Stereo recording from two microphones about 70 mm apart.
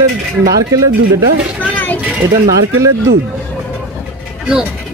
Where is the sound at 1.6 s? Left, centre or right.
Left.